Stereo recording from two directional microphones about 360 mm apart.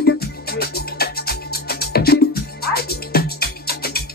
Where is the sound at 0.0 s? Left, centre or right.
Left.